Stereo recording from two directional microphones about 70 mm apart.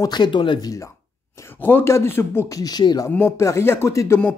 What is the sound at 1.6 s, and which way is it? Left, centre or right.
Speech, left.